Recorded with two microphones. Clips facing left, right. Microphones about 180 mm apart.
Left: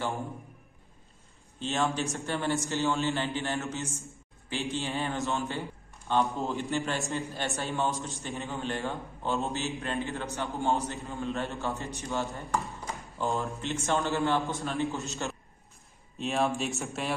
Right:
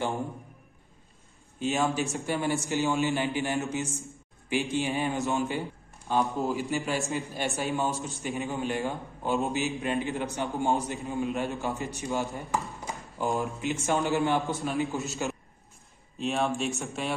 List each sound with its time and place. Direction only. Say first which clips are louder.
1.6 s a man's voice: right 2 dB; 10° right (ahead or behind)
6.1 s speech: right 1 dB; centre (ahead or behind)
7.1 s a man's voice: right 2 dB; 15° right (ahead or behind)
12.8 s a sound: right 1 dB; 15° right (ahead or behind)
13.8 s a man's voice: right 2 dB; 15° right (ahead or behind)